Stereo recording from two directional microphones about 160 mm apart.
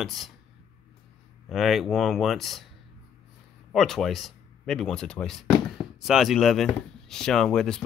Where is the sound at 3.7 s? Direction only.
Centre (ahead or behind).